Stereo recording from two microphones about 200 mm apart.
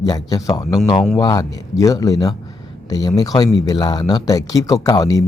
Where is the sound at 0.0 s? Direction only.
15° left (ahead or behind).